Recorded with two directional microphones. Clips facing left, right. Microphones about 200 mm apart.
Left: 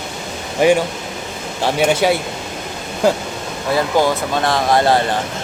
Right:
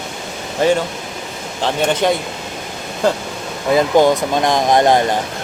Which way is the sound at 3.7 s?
20° right (ahead or behind).